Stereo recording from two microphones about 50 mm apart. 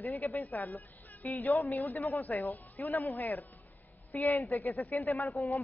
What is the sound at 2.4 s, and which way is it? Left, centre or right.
A woman's voice, left.